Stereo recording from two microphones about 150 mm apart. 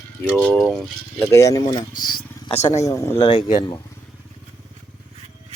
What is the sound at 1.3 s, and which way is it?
Speech, 20° left (ahead or behind).